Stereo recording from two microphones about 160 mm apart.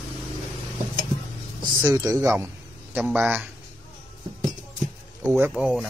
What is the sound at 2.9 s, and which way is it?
Speech, 10° right (ahead or behind).